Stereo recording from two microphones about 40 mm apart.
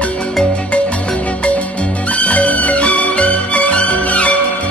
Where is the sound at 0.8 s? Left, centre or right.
Left.